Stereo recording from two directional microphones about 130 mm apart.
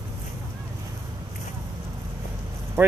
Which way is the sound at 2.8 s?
15° right (ahead or behind).